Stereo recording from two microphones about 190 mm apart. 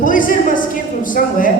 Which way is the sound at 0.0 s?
45° left (ahead or behind).